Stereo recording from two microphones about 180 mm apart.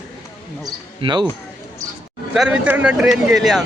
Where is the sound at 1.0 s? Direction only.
25° right (ahead or behind).